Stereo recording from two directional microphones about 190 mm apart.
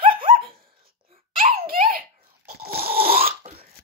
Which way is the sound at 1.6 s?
50° right (ahead or behind).